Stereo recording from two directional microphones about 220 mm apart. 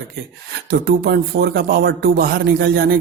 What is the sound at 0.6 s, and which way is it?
A man's voice, 50° right (ahead or behind).